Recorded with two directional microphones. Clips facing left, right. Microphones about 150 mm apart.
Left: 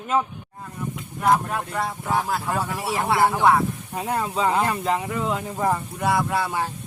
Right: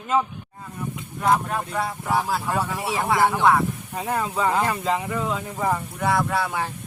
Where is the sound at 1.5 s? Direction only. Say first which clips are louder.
Even; centre (ahead or behind).